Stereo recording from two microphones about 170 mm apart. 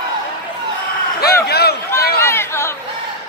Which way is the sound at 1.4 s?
70° left (ahead or behind).